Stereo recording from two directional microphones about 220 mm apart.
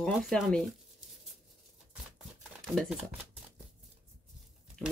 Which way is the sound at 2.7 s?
Centre (ahead or behind).